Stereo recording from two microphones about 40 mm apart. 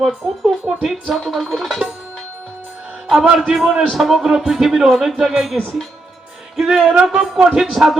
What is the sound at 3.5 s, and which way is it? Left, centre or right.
A man's voice, centre.